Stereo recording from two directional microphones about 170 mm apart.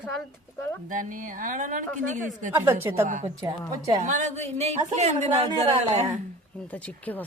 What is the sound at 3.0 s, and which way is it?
A woman's voice, 50° right (ahead or behind).